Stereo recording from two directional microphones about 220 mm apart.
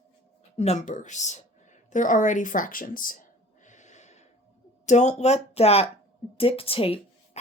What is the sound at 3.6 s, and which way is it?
Gasp, 35° left (ahead or behind).